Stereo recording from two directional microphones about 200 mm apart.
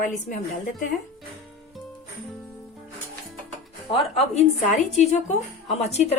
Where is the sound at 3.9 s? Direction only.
30° left (ahead or behind).